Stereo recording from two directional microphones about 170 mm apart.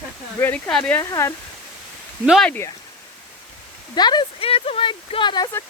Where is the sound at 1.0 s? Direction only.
20° left (ahead or behind).